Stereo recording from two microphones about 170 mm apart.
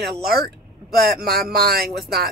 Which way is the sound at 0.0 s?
65° right (ahead or behind).